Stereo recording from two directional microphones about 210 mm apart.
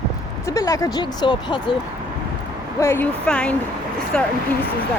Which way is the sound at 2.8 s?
10° left (ahead or behind).